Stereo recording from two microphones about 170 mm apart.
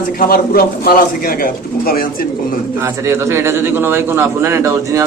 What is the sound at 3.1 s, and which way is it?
Speech, 15° right (ahead or behind).